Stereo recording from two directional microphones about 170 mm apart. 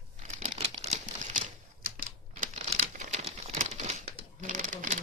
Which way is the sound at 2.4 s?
40° right (ahead or behind).